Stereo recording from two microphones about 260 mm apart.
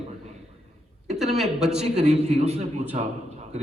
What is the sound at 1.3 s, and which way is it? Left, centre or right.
Speech, centre.